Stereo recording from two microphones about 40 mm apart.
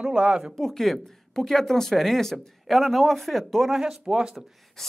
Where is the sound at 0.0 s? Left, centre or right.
Right.